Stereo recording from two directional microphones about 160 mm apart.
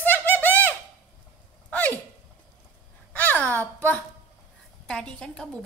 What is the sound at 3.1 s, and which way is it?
Speech, 10° left (ahead or behind).